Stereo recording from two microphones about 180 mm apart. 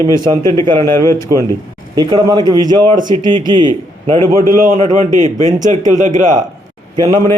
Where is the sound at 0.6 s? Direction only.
25° right (ahead or behind).